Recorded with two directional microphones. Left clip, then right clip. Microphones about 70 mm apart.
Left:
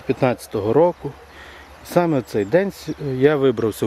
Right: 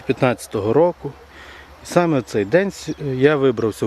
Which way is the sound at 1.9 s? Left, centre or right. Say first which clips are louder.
Right 1 dB; right.